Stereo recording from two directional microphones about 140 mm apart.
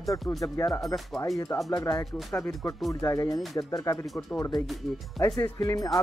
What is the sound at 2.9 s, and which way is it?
Speech, 25° left (ahead or behind).